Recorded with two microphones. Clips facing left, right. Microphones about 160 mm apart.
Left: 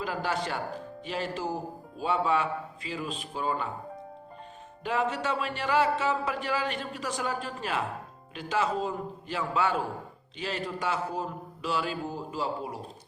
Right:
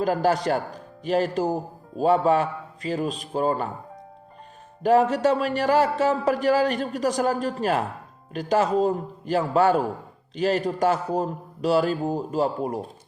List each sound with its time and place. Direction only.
0.0 s speech: 40° right (ahead or behind)
4.8 s speech: 40° right (ahead or behind)